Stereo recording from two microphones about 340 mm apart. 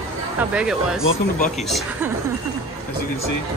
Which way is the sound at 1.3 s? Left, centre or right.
Left.